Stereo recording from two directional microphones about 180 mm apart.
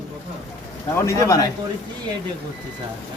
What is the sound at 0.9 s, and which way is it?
Speech, 15° left (ahead or behind).